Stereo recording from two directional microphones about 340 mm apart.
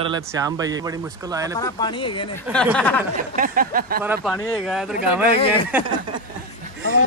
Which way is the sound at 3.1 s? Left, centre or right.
Right.